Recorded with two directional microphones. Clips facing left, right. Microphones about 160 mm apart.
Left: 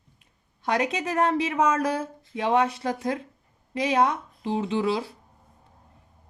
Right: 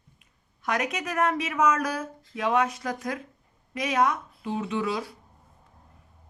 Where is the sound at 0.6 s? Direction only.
30° left (ahead or behind).